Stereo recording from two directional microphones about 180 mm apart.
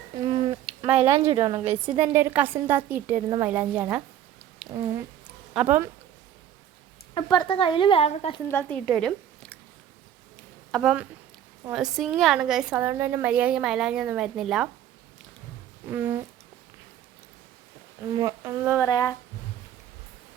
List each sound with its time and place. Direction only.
0.3 s a sound: 30° right (ahead or behind)
0.9 s speech: 35° right (ahead or behind)
2.0 s a woman's voice: 10° right (ahead or behind)
4.7 s speech: 25° right (ahead or behind)
5.5 s a woman's voice: 10° right (ahead or behind)
7.1 s speech: 25° left (ahead or behind)
8.4 s speech: 15° left (ahead or behind)
8.9 s a sound: 5° left (ahead or behind)
10.7 s a woman's voice: centre (ahead or behind)
15.9 s a woman's voice: 10° right (ahead or behind)
18.2 s a woman's voice: 15° right (ahead or behind)
18.9 s speech: 20° left (ahead or behind)